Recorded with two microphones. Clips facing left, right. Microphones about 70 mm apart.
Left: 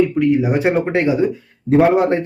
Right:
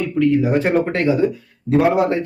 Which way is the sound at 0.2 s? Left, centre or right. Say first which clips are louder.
Even; centre.